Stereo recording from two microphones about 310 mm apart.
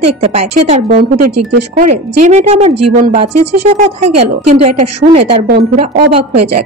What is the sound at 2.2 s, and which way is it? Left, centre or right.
Speech, right.